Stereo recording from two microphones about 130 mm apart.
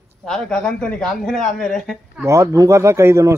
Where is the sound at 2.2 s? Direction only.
25° right (ahead or behind).